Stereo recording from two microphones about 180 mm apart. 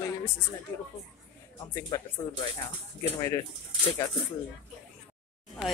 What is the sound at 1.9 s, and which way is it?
Speech, 15° left (ahead or behind).